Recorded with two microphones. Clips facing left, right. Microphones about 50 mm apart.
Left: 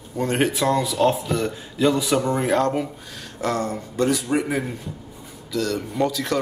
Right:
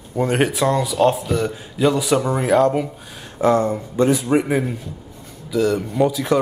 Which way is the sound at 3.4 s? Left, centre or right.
Centre.